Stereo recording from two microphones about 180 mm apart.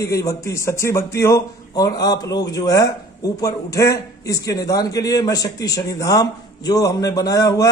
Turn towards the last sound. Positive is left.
turn(degrees=20)  # may be behind; listen again after turning